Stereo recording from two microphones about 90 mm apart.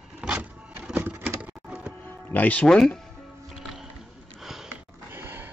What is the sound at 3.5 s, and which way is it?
Music, 5° right (ahead or behind).